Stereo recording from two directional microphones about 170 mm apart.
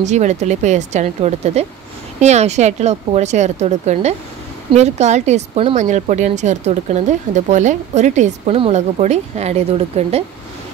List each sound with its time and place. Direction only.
0.0 s a woman's voice: 45° right (ahead or behind)